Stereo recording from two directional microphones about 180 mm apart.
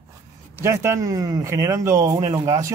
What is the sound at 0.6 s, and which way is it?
A man's voice, 15° right (ahead or behind).